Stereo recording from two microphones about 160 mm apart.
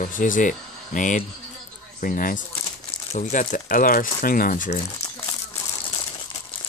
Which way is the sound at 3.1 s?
50° left (ahead or behind).